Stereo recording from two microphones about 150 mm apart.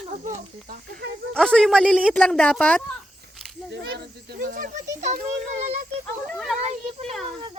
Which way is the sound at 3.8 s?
90° right.